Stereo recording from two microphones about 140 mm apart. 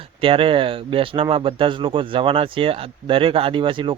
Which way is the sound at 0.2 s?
40° right (ahead or behind).